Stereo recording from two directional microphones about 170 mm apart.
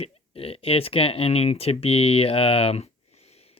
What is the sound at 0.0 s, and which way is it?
Speech, 35° left (ahead or behind).